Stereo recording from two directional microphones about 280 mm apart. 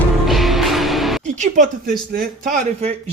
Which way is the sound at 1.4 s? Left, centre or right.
Right.